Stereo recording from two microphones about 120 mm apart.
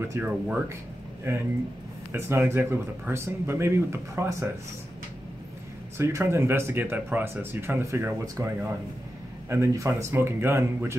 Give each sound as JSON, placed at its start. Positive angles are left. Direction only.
{"t": 0.1, "sound": "speech", "side_deg": -15}
{"t": 5.9, "sound": "speech", "side_deg": -20}